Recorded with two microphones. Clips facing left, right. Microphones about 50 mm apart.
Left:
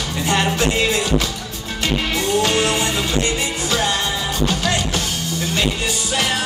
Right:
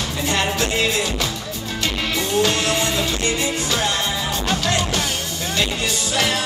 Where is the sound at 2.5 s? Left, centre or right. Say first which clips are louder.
Left 2 dB; centre.